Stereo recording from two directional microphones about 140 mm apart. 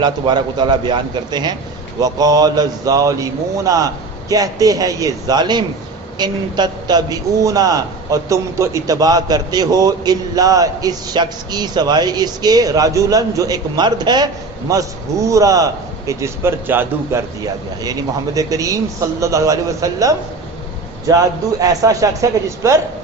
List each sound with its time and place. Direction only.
0.0 s a man's voice: 30° right (ahead or behind)